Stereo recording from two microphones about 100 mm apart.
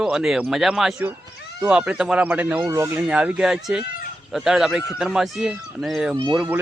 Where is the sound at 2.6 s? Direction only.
30° right (ahead or behind).